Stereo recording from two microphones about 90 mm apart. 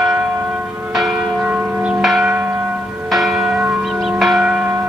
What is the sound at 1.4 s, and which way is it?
Church bell, 20° right (ahead or behind).